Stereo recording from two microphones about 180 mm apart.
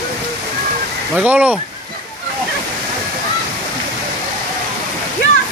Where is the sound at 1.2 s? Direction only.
10° right (ahead or behind).